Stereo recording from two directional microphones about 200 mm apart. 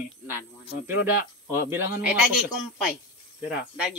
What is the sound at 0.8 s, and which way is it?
Speech, 10° right (ahead or behind).